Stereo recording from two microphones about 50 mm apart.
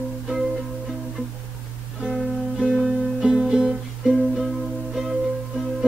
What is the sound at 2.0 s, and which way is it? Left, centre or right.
Music, centre.